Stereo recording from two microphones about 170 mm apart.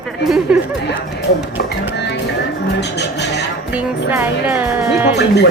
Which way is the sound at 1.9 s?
90° left.